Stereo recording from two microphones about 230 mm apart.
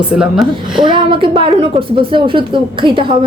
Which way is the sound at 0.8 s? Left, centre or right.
Right.